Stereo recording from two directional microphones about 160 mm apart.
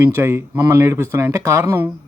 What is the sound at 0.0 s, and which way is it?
A man's voice, 15° right (ahead or behind).